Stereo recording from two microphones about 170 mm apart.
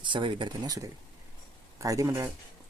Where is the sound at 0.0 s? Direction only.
30° right (ahead or behind).